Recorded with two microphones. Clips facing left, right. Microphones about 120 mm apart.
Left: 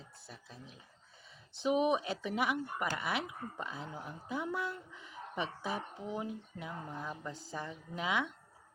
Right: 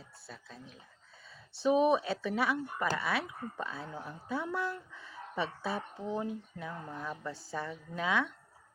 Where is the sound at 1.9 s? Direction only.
15° left (ahead or behind).